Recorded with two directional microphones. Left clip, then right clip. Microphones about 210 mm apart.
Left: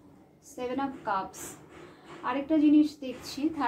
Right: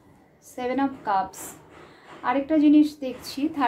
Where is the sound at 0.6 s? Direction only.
40° right (ahead or behind).